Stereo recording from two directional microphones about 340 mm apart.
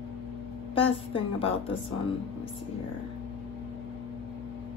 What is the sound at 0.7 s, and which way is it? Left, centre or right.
Speech, centre.